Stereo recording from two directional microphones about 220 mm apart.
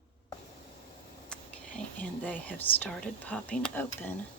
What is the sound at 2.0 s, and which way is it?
Speech, 5° left (ahead or behind).